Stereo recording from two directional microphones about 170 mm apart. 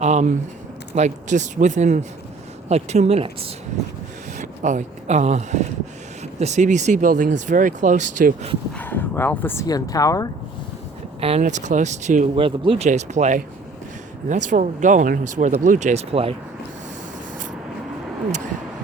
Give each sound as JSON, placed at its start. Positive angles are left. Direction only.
{"t": 0.0, "sound": "speech", "side_deg": -45}
{"t": 4.4, "sound": "speech", "side_deg": -45}
{"t": 8.7, "sound": "speech", "side_deg": 10}
{"t": 11.2, "sound": "speech", "side_deg": -35}
{"t": 11.4, "sound": "speech", "side_deg": -45}
{"t": 12.5, "sound": "speech", "side_deg": -30}
{"t": 12.9, "sound": "speech", "side_deg": -45}